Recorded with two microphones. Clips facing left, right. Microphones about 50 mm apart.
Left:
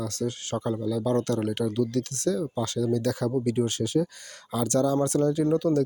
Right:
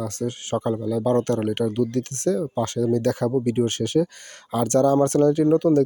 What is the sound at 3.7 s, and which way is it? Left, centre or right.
Speech, right.